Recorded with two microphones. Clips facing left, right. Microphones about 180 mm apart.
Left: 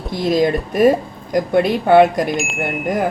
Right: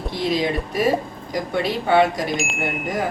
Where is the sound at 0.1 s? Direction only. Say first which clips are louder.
Left 6 dB; 45° left (ahead or behind).